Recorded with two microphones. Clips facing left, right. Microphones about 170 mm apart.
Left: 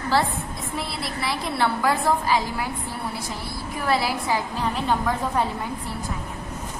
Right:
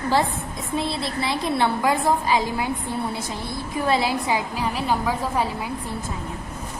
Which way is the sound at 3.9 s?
20° right (ahead or behind).